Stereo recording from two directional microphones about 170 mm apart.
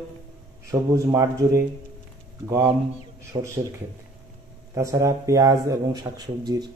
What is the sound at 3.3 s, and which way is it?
Speech, 25° right (ahead or behind).